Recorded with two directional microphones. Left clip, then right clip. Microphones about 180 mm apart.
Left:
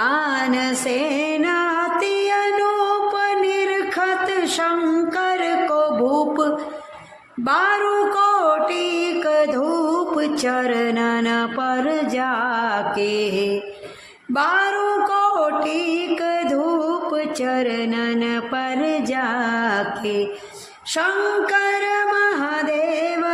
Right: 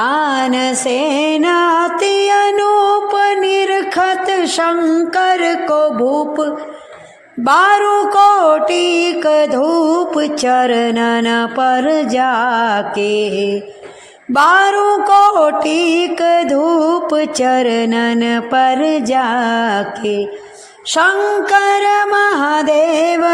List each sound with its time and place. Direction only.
0.0 s music: 25° right (ahead or behind)
6.1 s mantra: 15° right (ahead or behind)
7.4 s mantra: 35° right (ahead or behind)
13.1 s mantra: 15° right (ahead or behind)
14.3 s a sound: 40° right (ahead or behind); by 20.2 s 20° right (ahead or behind)
21.5 s a sound: 35° right (ahead or behind)